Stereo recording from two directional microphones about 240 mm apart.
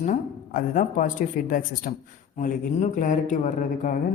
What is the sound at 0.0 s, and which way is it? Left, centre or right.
A woman's voice, left.